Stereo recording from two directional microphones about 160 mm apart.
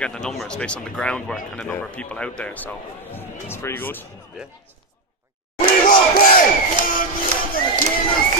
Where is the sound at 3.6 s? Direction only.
15° left (ahead or behind).